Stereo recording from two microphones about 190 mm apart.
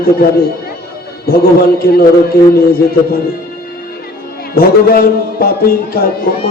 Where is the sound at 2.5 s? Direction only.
50° left (ahead or behind).